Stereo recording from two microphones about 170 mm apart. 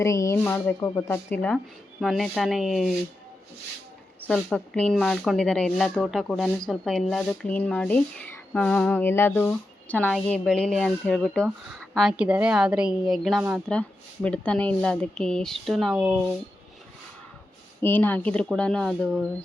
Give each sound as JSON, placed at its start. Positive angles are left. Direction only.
{"t": 0.0, "sound": "speech", "side_deg": 20}
{"t": 4.2, "sound": "speech", "side_deg": 5}
{"t": 17.7, "sound": "speech", "side_deg": 10}